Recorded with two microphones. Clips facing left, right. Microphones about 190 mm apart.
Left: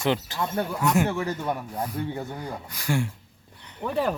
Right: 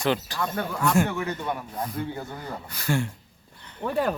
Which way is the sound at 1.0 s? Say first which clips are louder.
Left 2 dB; 35° left (ahead or behind).